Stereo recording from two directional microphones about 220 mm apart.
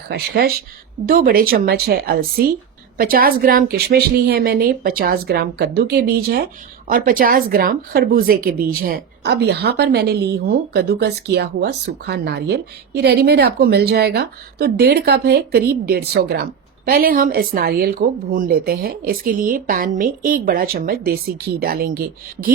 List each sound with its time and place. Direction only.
0.1 s a woman's voice: 45° right (ahead or behind)